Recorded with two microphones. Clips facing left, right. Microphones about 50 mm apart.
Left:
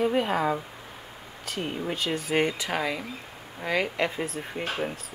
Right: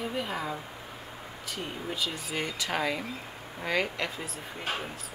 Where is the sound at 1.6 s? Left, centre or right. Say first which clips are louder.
Left 4 dB; left.